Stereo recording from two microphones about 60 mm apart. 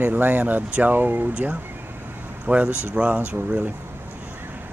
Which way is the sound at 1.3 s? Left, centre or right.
Right.